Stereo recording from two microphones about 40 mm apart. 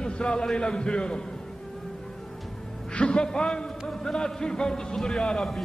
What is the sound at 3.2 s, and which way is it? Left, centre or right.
A man's voice, centre.